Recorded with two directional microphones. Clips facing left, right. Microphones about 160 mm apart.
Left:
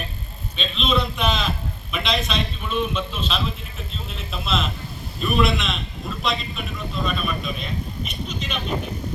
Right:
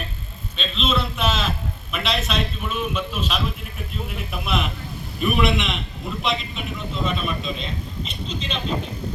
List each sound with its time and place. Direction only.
0.5 s a man's voice: centre (ahead or behind); by 8.6 s 30° right (ahead or behind)